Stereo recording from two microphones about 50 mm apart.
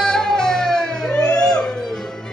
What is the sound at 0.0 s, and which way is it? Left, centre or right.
Music, centre.